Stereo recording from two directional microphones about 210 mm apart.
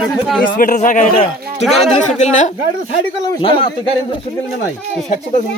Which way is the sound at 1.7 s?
Centre (ahead or behind).